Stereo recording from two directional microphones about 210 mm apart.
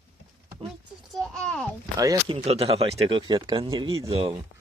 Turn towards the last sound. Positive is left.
turn(degrees=-25)  # may be behind; listen again after turning